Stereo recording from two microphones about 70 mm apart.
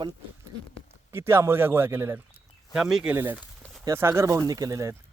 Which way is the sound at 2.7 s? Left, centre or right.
Centre.